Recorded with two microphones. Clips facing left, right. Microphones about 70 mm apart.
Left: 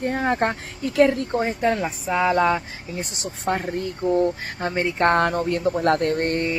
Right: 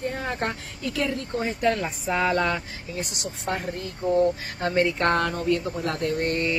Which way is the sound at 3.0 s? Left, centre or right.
Left.